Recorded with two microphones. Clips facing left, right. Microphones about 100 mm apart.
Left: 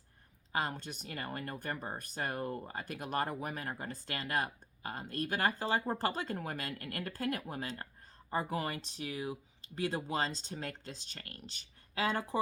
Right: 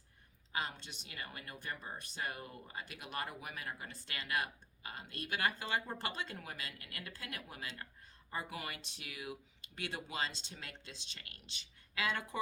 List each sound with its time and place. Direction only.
0.5 s speech: 45° left (ahead or behind)